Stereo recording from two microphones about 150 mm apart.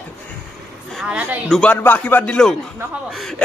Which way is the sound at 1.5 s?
5° left (ahead or behind).